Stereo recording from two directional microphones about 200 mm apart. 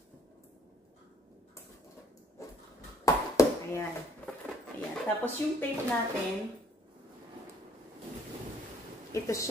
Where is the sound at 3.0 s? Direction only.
15° left (ahead or behind).